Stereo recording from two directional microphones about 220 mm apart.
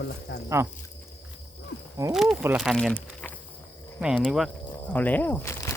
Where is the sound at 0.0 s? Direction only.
45° left (ahead or behind).